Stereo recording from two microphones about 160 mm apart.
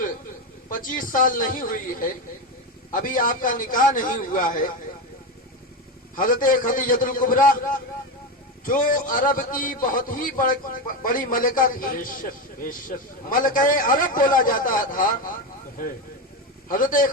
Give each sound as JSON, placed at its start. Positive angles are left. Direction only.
{"t": 0.7, "sound": "a man's voice", "side_deg": 55}
{"t": 6.1, "sound": "a man's voice", "side_deg": 60}
{"t": 8.6, "sound": "a man's voice", "side_deg": 55}
{"t": 16.6, "sound": "a man's voice", "side_deg": 60}